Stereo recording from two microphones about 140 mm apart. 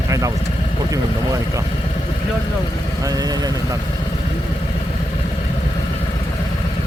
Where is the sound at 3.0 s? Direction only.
25° right (ahead or behind).